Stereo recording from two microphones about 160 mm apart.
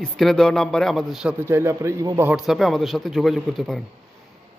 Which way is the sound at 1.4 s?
15° right (ahead or behind).